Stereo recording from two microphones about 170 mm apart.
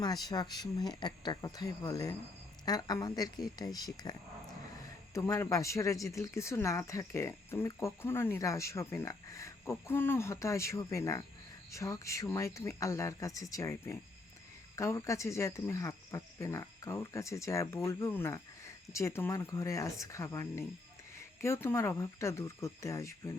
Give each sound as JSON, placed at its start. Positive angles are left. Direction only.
{"t": 0.0, "sound": "speech", "side_deg": 25}
{"t": 5.1, "sound": "speech", "side_deg": 15}